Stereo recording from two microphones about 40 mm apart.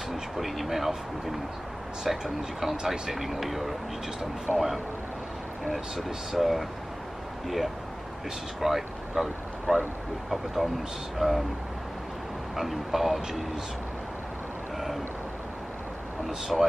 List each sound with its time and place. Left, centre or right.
0.1 s speech: centre
4.5 s speech: right
5.9 s speech: centre
10.3 s speech: centre
12.5 s speech: centre
16.3 s speech: centre